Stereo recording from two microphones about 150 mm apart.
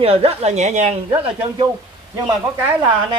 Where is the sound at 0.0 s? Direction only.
40° right (ahead or behind).